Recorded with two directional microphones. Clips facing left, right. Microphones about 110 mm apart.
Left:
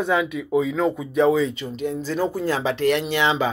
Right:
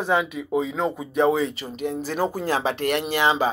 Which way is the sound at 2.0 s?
60° right (ahead or behind).